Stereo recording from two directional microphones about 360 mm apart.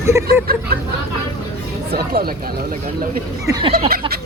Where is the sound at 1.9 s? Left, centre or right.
Right.